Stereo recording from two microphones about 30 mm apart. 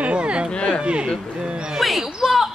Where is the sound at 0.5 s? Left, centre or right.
Left.